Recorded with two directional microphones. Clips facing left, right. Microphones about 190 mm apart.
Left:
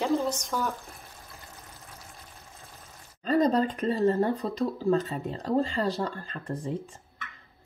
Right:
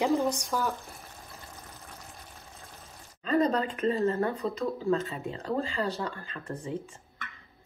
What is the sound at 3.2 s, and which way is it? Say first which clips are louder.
Speech: left 2 dB; 35° left (ahead or behind).